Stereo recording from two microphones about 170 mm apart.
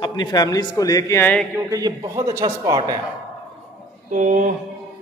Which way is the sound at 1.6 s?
20° right (ahead or behind).